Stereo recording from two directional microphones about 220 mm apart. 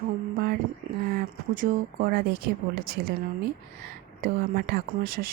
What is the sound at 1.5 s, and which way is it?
Speech, 45° right (ahead or behind).